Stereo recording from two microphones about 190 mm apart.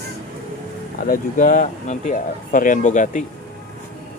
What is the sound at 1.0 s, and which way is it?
Speech, 45° left (ahead or behind).